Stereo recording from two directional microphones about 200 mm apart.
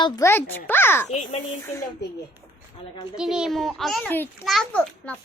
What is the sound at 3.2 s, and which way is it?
A woman's voice, 5° right (ahead or behind).